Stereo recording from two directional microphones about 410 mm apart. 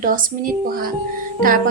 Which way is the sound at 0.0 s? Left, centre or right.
Centre.